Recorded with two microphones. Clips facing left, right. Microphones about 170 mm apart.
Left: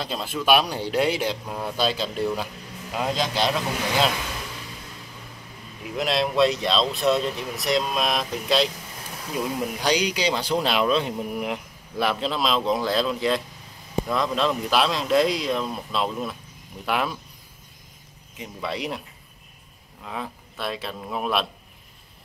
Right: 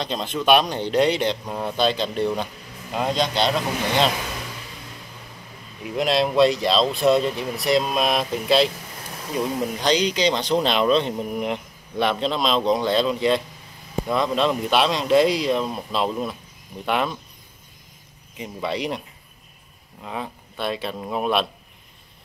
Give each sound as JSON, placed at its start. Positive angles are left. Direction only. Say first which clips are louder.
{"t": 0.0, "sound": "speech", "louder": "right 3 dB", "side_deg": 5}
{"t": 5.9, "sound": "speech", "louder": "right 3 dB", "side_deg": 0}
{"t": 18.4, "sound": "speech", "louder": "right 3 dB", "side_deg": 0}